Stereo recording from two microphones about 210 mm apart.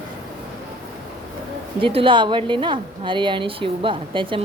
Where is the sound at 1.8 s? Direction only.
25° right (ahead or behind).